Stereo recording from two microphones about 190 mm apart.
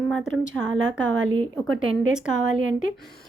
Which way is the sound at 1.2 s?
90° right.